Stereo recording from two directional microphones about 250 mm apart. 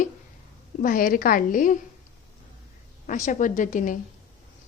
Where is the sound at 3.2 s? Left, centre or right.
Left.